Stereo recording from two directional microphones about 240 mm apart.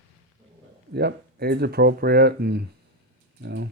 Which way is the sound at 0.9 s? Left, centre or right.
Right.